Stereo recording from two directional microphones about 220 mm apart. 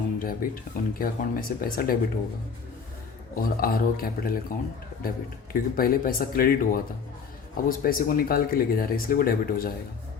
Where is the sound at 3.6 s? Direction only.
40° left (ahead or behind).